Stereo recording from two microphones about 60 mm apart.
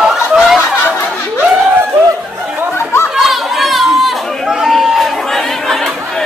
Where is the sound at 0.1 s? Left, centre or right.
Centre.